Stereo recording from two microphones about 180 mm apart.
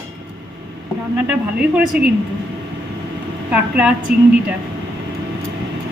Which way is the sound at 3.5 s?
5° right (ahead or behind).